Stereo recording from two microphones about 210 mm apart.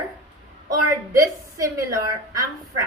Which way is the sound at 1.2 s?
15° right (ahead or behind).